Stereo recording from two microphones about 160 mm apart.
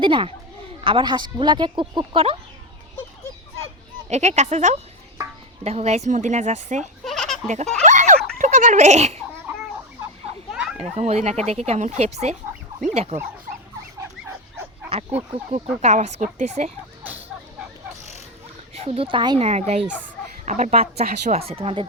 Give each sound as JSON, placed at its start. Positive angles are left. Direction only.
{"t": 0.0, "sound": "speech", "side_deg": -30}
{"t": 4.1, "sound": "speech", "side_deg": -45}
{"t": 7.0, "sound": "a sound", "side_deg": 0}
{"t": 7.4, "sound": "speech", "side_deg": -45}
{"t": 7.9, "sound": "giggle", "side_deg": -50}
{"t": 10.5, "sound": "children playing", "side_deg": -5}
{"t": 10.8, "sound": "speech", "side_deg": -40}
{"t": 15.5, "sound": "speech", "side_deg": -45}
{"t": 18.7, "sound": "speech", "side_deg": -40}
{"t": 19.5, "sound": "speech", "side_deg": -45}